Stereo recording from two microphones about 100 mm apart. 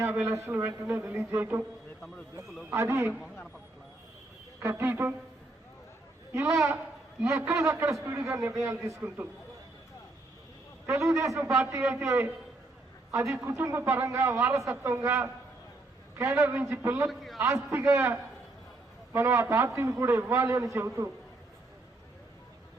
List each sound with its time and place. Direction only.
0.0 s a man's voice: 20° right (ahead or behind)
2.6 s a man's voice: 25° right (ahead or behind)
4.6 s a man's voice: 25° right (ahead or behind)
6.3 s a man's voice: 25° right (ahead or behind)
10.8 s a man's voice: 30° right (ahead or behind)
17.1 s a man's voice: centre (ahead or behind)
17.4 s a man's voice: 25° right (ahead or behind)